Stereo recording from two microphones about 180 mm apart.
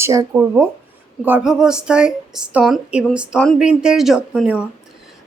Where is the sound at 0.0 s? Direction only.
15° right (ahead or behind).